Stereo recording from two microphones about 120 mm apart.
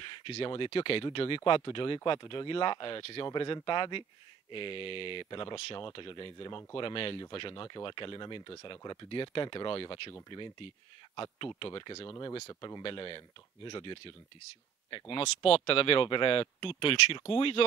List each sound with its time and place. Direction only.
0.0 s speech: 45° left (ahead or behind)
12.1 s speech: 30° left (ahead or behind); by 17.6 s 50° left (ahead or behind)